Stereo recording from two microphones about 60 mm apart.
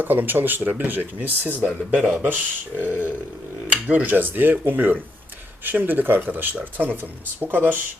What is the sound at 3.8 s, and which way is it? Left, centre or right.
Speech, right.